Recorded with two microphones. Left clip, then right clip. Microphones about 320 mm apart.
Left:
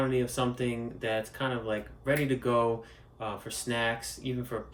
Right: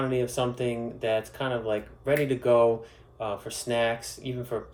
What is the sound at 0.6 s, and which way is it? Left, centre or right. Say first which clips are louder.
Speech: right 4 dB; right.